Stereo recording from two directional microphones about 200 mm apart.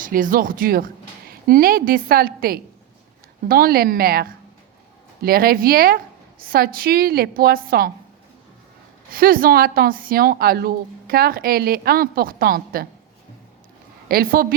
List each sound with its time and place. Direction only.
0.0 s a woman's voice: 45° right (ahead or behind)
9.1 s a woman's voice: 45° right (ahead or behind)
14.1 s a woman's voice: 45° right (ahead or behind)